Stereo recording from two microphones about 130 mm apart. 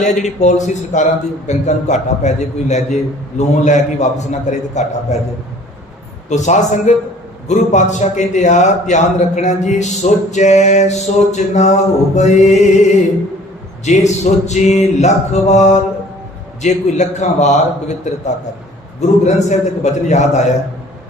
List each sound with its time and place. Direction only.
0.0 s a man's voice: 65° left (ahead or behind)
6.2 s a man's voice: 65° left (ahead or behind)
13.8 s a man's voice: 65° left (ahead or behind)